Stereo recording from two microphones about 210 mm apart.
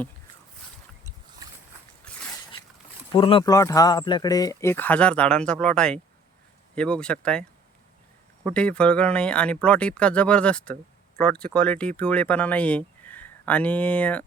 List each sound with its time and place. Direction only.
3.1 s speech: 25° left (ahead or behind); by 7.4 s 5° left (ahead or behind)
8.4 s speech: 5° left (ahead or behind)